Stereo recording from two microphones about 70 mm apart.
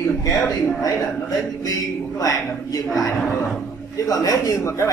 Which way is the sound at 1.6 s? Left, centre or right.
Left.